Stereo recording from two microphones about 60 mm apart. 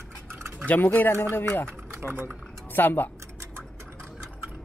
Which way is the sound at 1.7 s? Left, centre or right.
Right.